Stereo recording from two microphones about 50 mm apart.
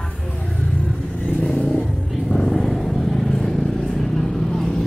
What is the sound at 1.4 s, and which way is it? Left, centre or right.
Vehicle, left.